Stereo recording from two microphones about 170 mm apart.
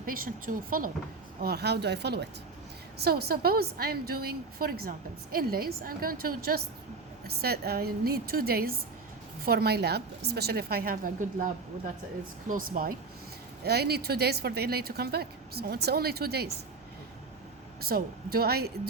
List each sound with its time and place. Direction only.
0.0 s a woman's voice: 55° right (ahead or behind)
1.4 s speech: 70° right (ahead or behind)
3.0 s a woman's voice: 65° right (ahead or behind)
13.7 s speech: 70° right (ahead or behind)
17.8 s a woman's voice: 65° right (ahead or behind)